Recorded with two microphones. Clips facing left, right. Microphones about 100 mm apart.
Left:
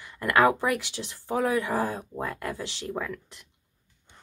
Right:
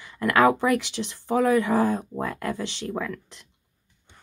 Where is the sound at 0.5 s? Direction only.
60° right (ahead or behind).